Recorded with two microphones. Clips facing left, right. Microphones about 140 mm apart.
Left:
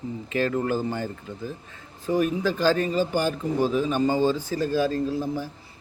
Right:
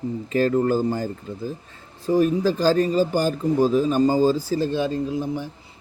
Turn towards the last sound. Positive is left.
turn(degrees=-20)  # may be behind; listen again after turning